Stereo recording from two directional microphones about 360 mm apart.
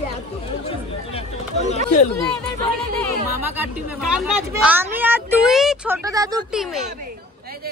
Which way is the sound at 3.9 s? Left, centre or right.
Centre.